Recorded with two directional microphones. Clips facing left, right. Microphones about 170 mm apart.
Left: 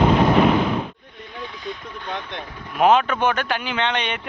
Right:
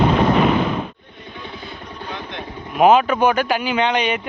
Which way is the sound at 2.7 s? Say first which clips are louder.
Right 3 dB; 10° right (ahead or behind).